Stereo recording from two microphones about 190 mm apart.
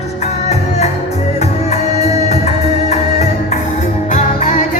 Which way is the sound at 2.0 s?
35° left (ahead or behind).